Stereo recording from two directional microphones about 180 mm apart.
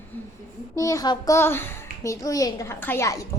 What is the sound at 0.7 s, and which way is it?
A child's voice, 20° left (ahead or behind).